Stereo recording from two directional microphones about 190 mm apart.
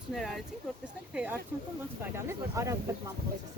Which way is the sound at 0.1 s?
Centre (ahead or behind).